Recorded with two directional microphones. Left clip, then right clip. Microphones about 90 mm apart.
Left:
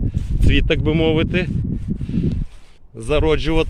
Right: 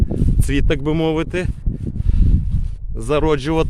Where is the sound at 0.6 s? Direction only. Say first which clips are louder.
Left 1 dB; 20° right (ahead or behind).